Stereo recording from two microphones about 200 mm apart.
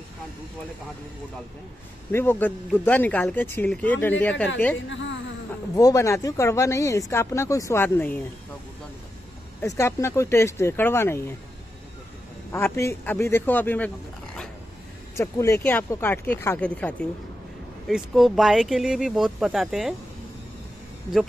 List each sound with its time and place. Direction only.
2.1 s speech: 10° left (ahead or behind)
4.7 s a man's voice: 65° left (ahead or behind)
5.8 s speech: 15° left (ahead or behind)
9.6 s speech: 15° left (ahead or behind)
12.5 s speech: 15° left (ahead or behind)